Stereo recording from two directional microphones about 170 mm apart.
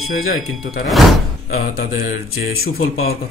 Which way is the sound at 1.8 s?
65° left (ahead or behind).